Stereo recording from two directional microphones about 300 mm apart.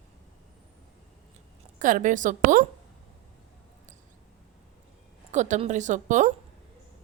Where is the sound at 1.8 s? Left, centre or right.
Right.